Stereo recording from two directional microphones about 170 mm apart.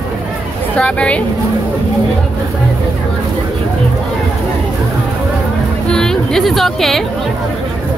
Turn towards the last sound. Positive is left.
turn(degrees=0)  # may be behind; listen again after turning